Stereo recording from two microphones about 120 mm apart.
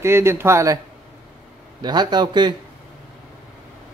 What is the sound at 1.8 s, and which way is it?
Speech, 35° right (ahead or behind).